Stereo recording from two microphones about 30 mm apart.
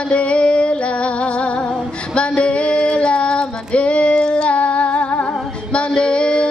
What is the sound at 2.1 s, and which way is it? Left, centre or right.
Female singing, left.